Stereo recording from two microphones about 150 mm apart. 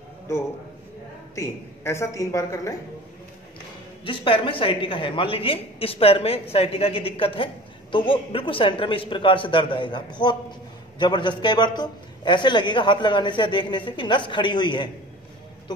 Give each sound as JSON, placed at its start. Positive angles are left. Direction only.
{"t": 0.3, "sound": "a woman's voice", "side_deg": 20}
{"t": 4.0, "sound": "a woman's voice", "side_deg": 35}